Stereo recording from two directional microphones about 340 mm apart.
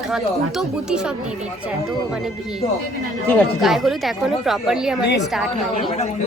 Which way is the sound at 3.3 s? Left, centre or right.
Centre.